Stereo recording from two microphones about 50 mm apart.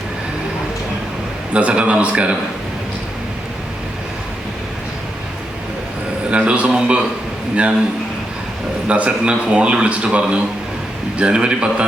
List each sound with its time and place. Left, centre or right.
1.5 s a man's voice: right
6.3 s a man's voice: right
8.9 s a man's voice: right